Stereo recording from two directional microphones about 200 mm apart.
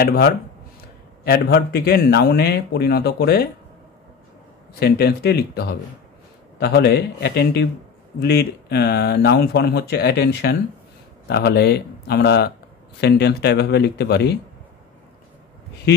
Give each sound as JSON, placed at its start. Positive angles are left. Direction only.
{"t": 0.0, "sound": "a man's voice", "side_deg": 50}
{"t": 4.7, "sound": "a man's voice", "side_deg": 55}